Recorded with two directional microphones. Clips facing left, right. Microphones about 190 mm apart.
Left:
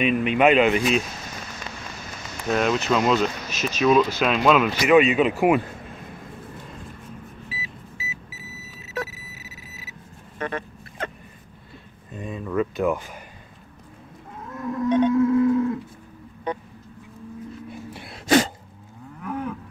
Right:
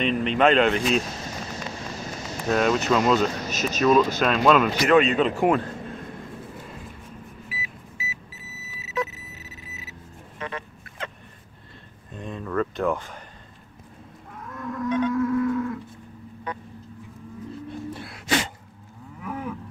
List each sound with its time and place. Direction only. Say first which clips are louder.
0.0 s speech: left 2 dB; 10° left (ahead or behind)
2.5 s speech: even; centre (ahead or behind)
3.4 s speech: right 1 dB; 40° right (ahead or behind)
4.2 s speech: even; 5° left (ahead or behind)
7.4 s vehicle: left 1 dB; 30° left (ahead or behind)
9.1 s a sound: even; 5° left (ahead or behind)
10.4 s dog: left 5 dB; 50° left (ahead or behind)
12.1 s a sound: left 2 dB; 5° left (ahead or behind)
14.5 s livestock: left 4 dB; 25° left (ahead or behind)
17.6 s a sound: right 3 dB; 15° left (ahead or behind)
18.1 s sneeze: left 8 dB; 35° left (ahead or behind)
19.2 s moo: left 3 dB; 5° right (ahead or behind)